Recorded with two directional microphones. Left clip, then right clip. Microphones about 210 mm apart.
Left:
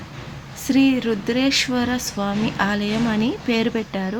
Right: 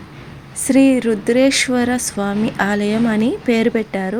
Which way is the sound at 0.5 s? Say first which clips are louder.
Right 5 dB; 20° right (ahead or behind).